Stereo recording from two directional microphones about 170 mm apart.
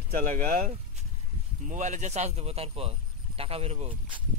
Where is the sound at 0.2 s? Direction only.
50° right (ahead or behind).